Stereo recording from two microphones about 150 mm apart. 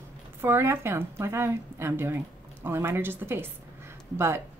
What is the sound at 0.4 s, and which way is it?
A woman's voice, 15° right (ahead or behind).